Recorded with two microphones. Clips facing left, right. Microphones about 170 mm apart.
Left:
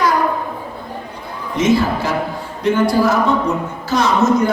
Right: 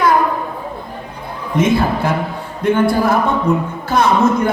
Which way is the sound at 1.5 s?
55° right (ahead or behind).